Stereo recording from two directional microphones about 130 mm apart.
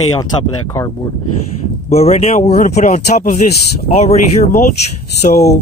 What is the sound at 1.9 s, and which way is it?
Speech, 55° left (ahead or behind).